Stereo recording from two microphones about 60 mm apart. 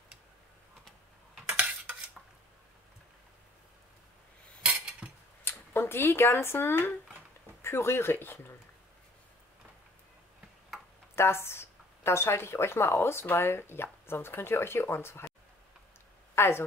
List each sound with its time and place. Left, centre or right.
4.6 s cutlery: centre
5.4 s speech: left
11.1 s a woman's voice: left
16.3 s speech: left